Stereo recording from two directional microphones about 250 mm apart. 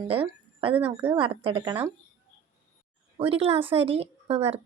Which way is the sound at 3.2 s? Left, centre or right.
Right.